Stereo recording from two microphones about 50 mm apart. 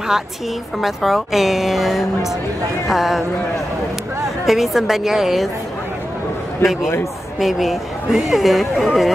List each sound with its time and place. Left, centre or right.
0.7 s speech: centre
4.5 s a woman's voice: centre
6.6 s speech: left
7.3 s speech: centre